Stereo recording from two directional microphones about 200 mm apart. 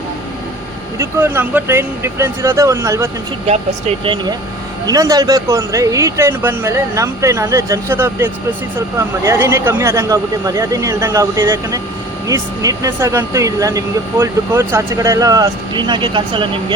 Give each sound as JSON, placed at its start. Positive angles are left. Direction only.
{"t": 0.9, "sound": "speech", "side_deg": -10}
{"t": 3.4, "sound": "speech", "side_deg": -30}